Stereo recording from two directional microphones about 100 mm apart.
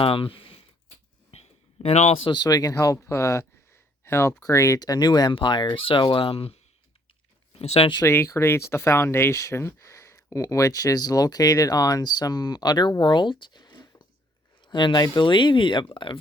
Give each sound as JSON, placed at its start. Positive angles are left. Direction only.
{"t": 0.0, "sound": "speech", "side_deg": 65}
{"t": 1.3, "sound": "a sound", "side_deg": 90}
{"t": 2.3, "sound": "speech", "side_deg": 40}
{"t": 7.6, "sound": "speech", "side_deg": 90}
{"t": 8.0, "sound": "speech", "side_deg": 25}